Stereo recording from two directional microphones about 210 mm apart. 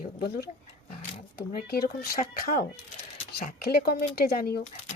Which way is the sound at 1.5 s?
45° left (ahead or behind).